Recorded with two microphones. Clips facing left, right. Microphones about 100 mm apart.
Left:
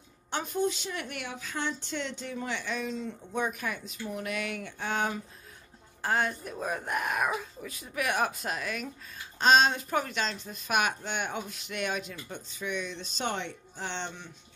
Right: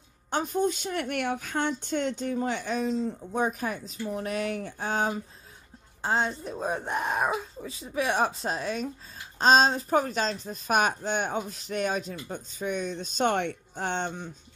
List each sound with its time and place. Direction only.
0.3 s a woman's voice: 40° right (ahead or behind)
6.0 s speech: 25° right (ahead or behind); by 14.3 s 45° right (ahead or behind)